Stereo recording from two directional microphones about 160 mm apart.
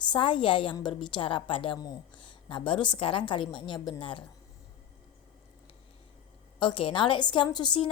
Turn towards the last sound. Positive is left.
turn(degrees=30)  # may be behind; listen again after turning